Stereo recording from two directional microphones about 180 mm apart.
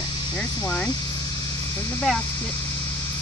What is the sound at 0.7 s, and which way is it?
Speech, 10° left (ahead or behind).